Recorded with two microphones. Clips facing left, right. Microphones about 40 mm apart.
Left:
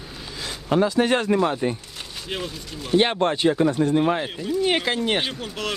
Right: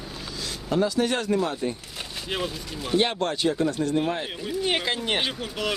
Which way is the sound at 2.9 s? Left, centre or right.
Left.